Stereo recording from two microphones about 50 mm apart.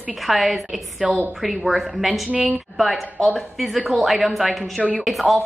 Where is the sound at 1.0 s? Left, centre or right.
Right.